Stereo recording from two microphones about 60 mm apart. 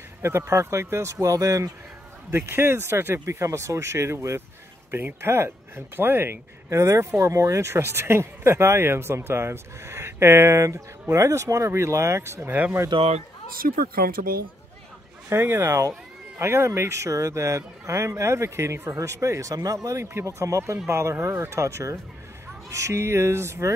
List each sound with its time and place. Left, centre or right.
0.2 s speech: right
1.1 s speech: right
2.3 s speech: right
4.9 s speech: right
6.7 s speech: right
15.2 s speech: right
19.5 s speech: right